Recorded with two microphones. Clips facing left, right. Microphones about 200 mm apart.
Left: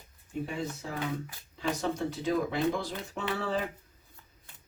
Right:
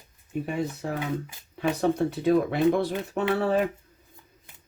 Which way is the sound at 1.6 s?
60° right (ahead or behind).